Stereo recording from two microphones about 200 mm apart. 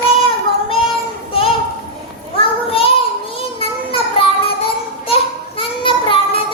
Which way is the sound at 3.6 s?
25° left (ahead or behind).